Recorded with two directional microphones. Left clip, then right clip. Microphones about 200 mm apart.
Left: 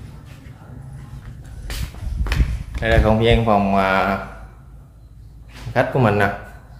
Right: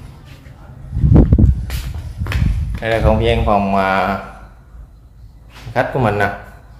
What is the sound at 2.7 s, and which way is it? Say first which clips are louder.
A man's voice: right 1 dB; 5° left (ahead or behind).